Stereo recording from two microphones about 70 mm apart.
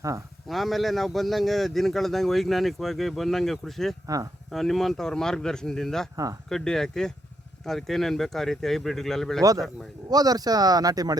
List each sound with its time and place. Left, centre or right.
0.4 s a man's voice: centre
4.0 s speech: right
4.5 s a man's voice: centre
9.4 s speech: right